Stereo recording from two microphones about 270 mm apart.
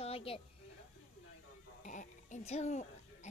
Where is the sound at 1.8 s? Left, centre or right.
Left.